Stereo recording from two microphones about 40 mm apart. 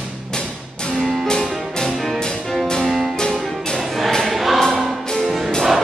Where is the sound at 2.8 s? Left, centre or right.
Centre.